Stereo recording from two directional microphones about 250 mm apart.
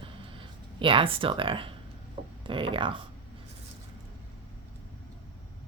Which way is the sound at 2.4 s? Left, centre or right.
Right.